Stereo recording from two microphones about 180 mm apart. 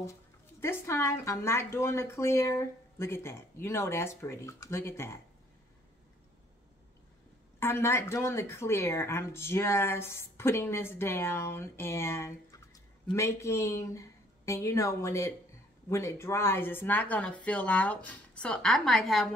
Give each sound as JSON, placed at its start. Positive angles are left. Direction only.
{"t": 0.6, "sound": "a woman's voice", "side_deg": 15}
{"t": 7.6, "sound": "a woman's voice", "side_deg": 15}